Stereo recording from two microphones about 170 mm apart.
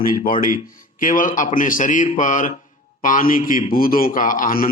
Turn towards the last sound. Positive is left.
turn(degrees=55)  # may be behind; listen again after turning